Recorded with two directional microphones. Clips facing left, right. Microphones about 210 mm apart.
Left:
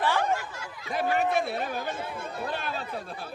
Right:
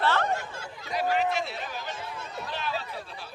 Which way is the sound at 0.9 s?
50° left (ahead or behind).